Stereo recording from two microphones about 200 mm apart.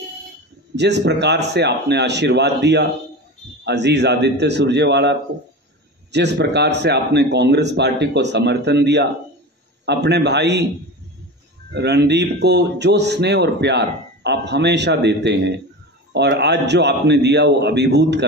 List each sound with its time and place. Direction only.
0.7 s a man's voice: 60° right (ahead or behind)
6.1 s a man's voice: 60° right (ahead or behind)
11.7 s a man's voice: 55° right (ahead or behind)